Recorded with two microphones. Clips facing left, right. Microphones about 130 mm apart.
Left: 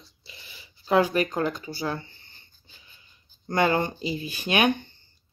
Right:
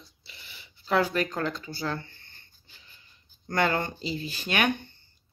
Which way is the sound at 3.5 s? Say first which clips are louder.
Left 3 dB; 15° left (ahead or behind).